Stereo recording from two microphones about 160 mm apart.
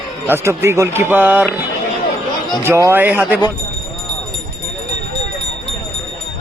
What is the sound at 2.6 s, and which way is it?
Speech, 15° right (ahead or behind).